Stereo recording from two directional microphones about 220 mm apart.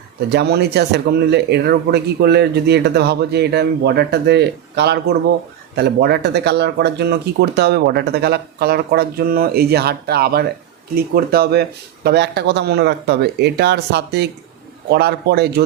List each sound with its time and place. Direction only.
0.3 s speech: 50° right (ahead or behind)